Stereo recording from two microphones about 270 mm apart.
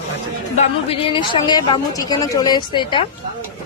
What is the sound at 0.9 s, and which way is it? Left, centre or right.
A woman's voice, centre.